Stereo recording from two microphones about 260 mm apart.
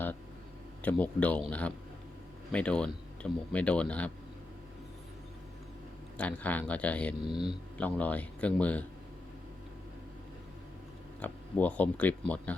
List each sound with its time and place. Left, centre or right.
0.8 s speech: centre
6.1 s speech: centre
7.3 s speech: centre
7.8 s speech: centre
11.2 s speech: centre